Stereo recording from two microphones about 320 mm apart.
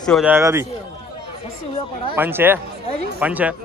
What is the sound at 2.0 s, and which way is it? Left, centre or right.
Speech, centre.